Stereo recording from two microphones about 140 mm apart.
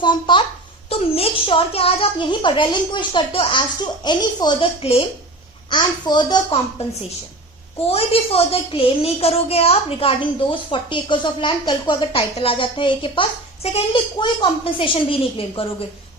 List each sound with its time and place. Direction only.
0.0 s a child's voice: 35° left (ahead or behind)
5.7 s a woman's voice: 30° left (ahead or behind)
7.9 s a woman's voice: 45° left (ahead or behind)